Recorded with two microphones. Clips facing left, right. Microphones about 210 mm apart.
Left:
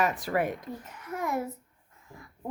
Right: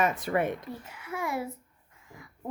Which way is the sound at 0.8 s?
10° right (ahead or behind).